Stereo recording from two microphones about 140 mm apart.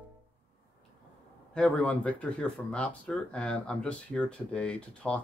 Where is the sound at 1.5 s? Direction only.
10° left (ahead or behind).